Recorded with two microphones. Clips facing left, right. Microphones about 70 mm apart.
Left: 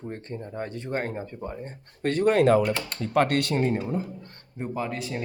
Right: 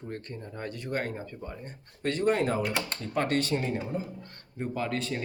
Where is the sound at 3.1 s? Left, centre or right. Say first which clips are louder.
Left 5 dB; left.